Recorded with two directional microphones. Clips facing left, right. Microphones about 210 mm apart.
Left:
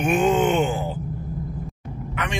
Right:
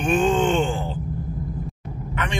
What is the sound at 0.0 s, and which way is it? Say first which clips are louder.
Groan: even; 10° left (ahead or behind).